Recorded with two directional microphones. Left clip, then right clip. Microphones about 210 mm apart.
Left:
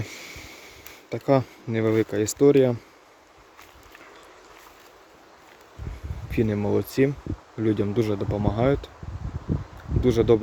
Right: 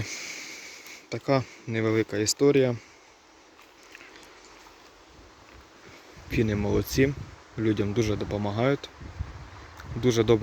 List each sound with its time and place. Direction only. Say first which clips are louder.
0.0 s a sound: right 2 dB; 10° left (ahead or behind)
6.3 s speech: left 2 dB; 5° left (ahead or behind)
10.0 s speech: left 3 dB; 5° left (ahead or behind)